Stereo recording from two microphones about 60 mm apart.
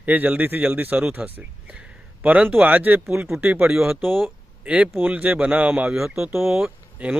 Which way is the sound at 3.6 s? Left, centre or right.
Centre.